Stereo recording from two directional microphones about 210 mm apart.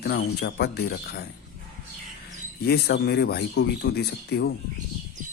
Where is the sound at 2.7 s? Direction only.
50° left (ahead or behind).